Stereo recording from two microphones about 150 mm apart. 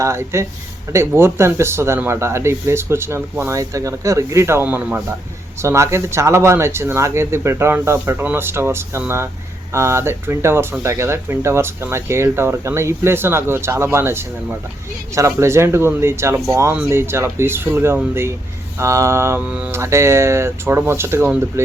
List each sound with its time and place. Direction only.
0.0 s speech: 20° right (ahead or behind)